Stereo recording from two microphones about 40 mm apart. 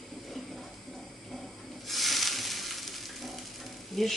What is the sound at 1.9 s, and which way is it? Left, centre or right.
Rub, centre.